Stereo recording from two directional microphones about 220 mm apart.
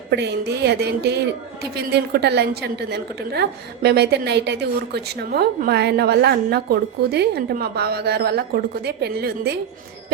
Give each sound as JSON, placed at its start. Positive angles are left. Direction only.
{"t": 0.1, "sound": "a woman's voice", "side_deg": -50}